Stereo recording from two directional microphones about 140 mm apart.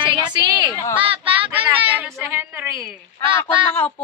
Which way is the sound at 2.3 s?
15° right (ahead or behind).